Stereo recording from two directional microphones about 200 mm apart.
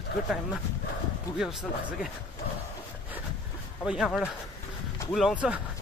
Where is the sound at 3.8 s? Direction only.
Centre (ahead or behind).